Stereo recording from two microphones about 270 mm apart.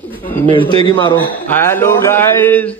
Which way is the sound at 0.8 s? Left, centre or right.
Centre.